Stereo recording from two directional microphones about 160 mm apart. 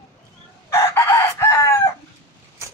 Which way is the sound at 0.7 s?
15° left (ahead or behind).